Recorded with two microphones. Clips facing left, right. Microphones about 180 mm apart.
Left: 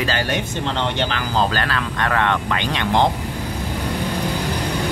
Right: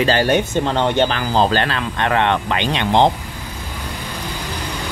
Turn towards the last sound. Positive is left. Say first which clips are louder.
# right 3 dB
turn(degrees=-20)  # may be behind; listen again after turning